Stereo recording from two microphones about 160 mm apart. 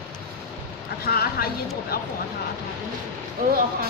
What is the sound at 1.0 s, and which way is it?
A woman's voice, 75° left (ahead or behind).